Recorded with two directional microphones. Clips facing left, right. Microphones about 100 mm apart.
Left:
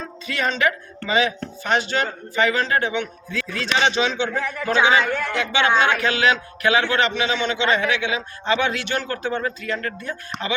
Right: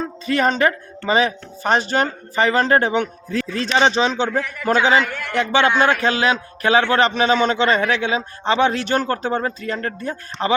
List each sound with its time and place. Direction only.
0.3 s a man's voice: 40° right (ahead or behind)